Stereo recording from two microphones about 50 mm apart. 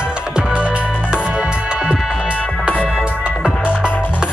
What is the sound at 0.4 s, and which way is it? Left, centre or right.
Music, right.